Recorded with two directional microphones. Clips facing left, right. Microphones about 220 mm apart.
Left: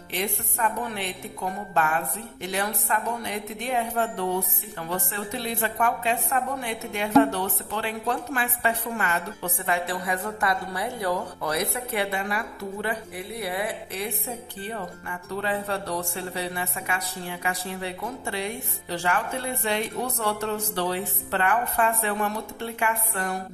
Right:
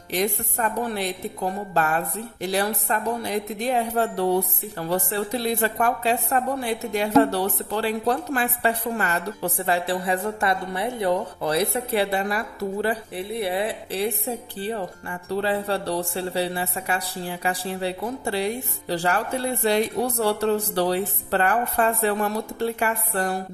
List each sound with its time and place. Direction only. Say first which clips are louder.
0.1 s a woman's voice: right 6 dB; 40° right (ahead or behind)